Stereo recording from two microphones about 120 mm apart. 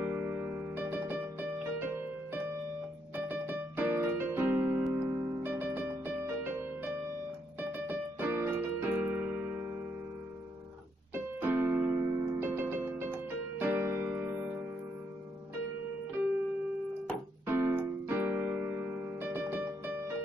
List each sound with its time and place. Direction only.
0.0 s music: 15° right (ahead or behind)
3.3 s keyboard: 15° right (ahead or behind)
4.9 s music: 20° right (ahead or behind)
5.4 s music: 15° right (ahead or behind)
7.8 s keyboard: 15° right (ahead or behind)
11.1 s music: 15° right (ahead or behind)
17.5 s piano: 15° right (ahead or behind)